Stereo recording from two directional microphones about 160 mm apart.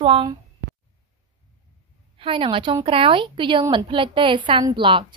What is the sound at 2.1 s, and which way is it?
A woman's voice, 35° right (ahead or behind).